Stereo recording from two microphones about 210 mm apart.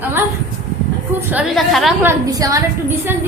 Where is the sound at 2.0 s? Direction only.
15° right (ahead or behind).